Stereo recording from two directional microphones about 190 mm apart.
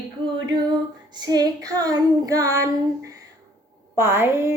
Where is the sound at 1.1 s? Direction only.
20° right (ahead or behind).